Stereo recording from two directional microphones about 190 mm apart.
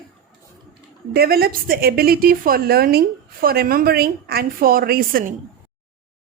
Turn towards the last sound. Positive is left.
turn(degrees=-50)  # may be behind; listen again after turning